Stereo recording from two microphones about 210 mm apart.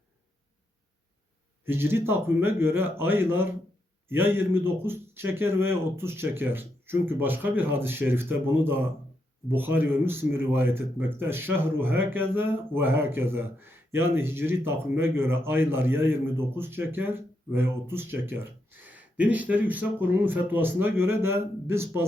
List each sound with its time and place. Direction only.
1.6 s speech: 10° right (ahead or behind)